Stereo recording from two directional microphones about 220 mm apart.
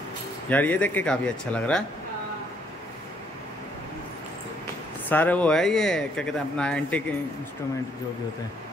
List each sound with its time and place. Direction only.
0.5 s speech: 5° left (ahead or behind)
5.1 s speech: 5° left (ahead or behind)